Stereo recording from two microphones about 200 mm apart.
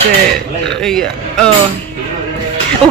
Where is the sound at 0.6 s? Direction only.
5° left (ahead or behind).